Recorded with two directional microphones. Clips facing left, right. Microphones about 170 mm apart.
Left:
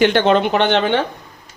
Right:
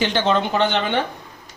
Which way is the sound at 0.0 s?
60° left (ahead or behind).